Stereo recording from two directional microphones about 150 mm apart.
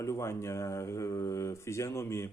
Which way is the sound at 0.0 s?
20° left (ahead or behind).